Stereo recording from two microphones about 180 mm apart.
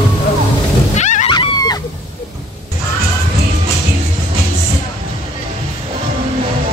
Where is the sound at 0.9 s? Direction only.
40° left (ahead or behind).